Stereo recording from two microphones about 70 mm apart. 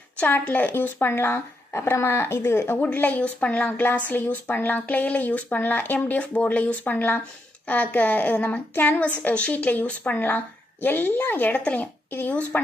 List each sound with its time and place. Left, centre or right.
0.2 s a woman's voice: left